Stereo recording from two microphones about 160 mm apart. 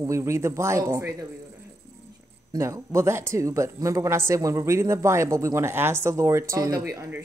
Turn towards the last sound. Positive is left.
turn(degrees=-15)  # may be behind; listen again after turning